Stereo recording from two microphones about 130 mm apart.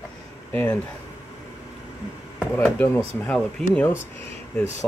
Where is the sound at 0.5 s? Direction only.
10° left (ahead or behind).